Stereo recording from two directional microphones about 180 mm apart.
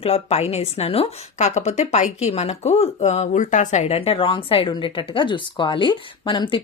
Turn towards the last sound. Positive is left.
turn(degrees=25)  # may be behind; listen again after turning